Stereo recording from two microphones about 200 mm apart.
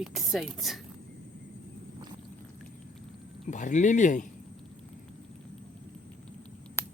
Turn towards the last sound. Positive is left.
turn(degrees=10)  # may be behind; listen again after turning